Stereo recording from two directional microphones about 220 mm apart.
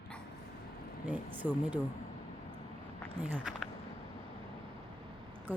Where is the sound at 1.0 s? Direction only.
5° right (ahead or behind).